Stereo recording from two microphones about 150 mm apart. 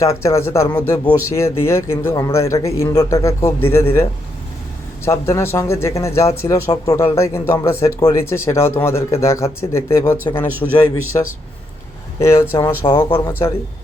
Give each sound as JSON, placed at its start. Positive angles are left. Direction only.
{"t": 0.0, "sound": "speech", "side_deg": 20}
{"t": 12.2, "sound": "speech", "side_deg": 20}
{"t": 12.8, "sound": "speech", "side_deg": 30}